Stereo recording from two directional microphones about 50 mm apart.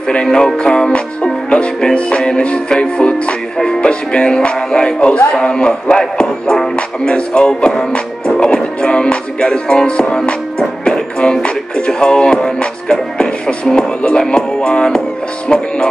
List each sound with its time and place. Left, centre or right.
0.1 s music: centre
0.6 s speech: centre
3.5 s music: centre
7.1 s speech: centre
10.6 s music: centre